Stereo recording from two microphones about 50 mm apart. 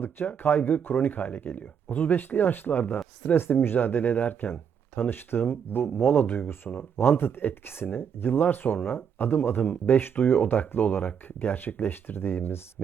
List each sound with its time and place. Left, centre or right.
0.0 s speech: left